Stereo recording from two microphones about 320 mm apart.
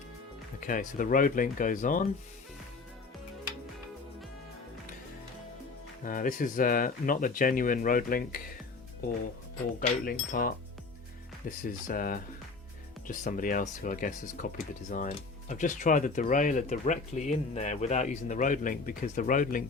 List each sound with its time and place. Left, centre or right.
0.6 s speech: left
6.0 s speech: left
10.1 s speech: left